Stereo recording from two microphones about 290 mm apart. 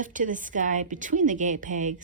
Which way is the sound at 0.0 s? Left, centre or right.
Right.